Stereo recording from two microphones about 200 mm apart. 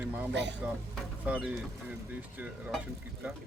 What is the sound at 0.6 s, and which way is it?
Speech, 10° right (ahead or behind).